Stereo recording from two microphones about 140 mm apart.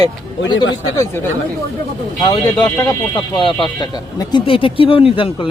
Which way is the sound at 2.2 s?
40° left (ahead or behind).